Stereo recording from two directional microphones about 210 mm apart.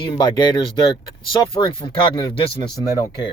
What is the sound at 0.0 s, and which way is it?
Speech, 20° left (ahead or behind).